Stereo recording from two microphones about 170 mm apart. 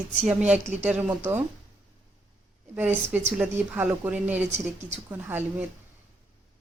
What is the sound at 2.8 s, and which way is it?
Speech, 10° right (ahead or behind).